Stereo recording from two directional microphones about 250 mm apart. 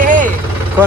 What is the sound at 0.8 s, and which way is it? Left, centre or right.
Speech, centre.